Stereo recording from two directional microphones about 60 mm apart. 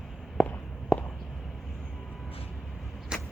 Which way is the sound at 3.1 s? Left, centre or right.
Centre.